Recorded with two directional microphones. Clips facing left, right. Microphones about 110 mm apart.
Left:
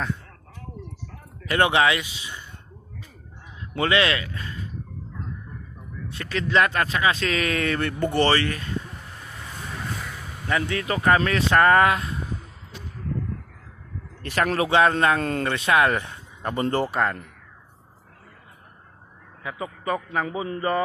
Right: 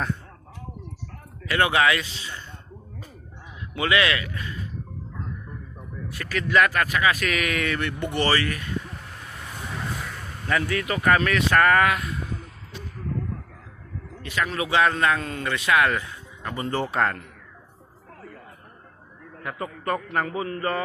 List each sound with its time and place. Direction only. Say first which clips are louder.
1.5 s speech: left 1 dB; 25° left (ahead or behind)
3.8 s speech: left 1 dB; 30° left (ahead or behind)
6.1 s speech: even; 25° left (ahead or behind)
9.2 s vehicle: even; 5° right (ahead or behind)
10.4 s speech: even; 25° left (ahead or behind)
14.2 s speech: left 4 dB; 50° left (ahead or behind)
16.8 s a man's voice: even; 5° left (ahead or behind)
19.5 s a man's voice: even; 5° left (ahead or behind)
20.3 s a man's voice: left 2 dB; 20° left (ahead or behind)